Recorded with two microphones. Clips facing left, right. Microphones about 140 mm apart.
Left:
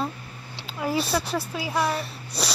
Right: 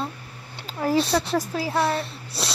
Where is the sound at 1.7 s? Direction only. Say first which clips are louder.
Right 1 dB; 30° right (ahead or behind).